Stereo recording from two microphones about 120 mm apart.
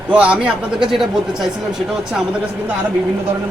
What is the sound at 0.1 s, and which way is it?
A man's voice, 10° right (ahead or behind).